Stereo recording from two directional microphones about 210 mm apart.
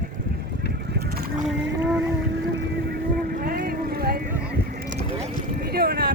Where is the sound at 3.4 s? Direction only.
45° right (ahead or behind).